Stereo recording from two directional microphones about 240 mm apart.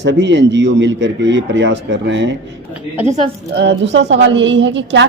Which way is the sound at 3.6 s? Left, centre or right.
Right.